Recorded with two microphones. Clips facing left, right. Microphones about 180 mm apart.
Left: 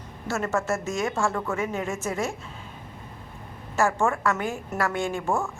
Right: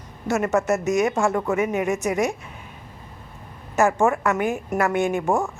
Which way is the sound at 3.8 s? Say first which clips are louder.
Right 4 dB; 20° right (ahead or behind).